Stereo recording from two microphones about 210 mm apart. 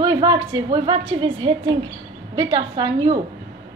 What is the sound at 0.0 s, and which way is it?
A woman's voice, 20° right (ahead or behind).